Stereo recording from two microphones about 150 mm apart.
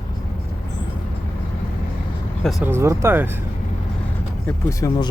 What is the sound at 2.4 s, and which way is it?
Speech, centre (ahead or behind).